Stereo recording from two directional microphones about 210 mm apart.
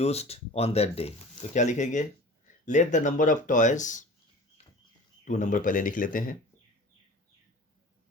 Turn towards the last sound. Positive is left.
turn(degrees=40)  # may be behind; listen again after turning